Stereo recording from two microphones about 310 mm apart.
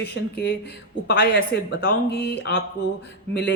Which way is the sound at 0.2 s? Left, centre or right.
Left.